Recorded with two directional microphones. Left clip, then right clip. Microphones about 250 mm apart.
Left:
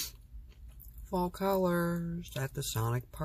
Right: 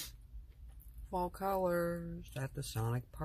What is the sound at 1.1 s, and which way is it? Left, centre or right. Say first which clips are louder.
Speech: left 4 dB; centre.